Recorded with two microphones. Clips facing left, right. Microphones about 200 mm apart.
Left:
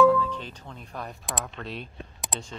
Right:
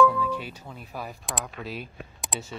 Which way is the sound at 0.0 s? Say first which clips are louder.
Left 2 dB; 10° right (ahead or behind).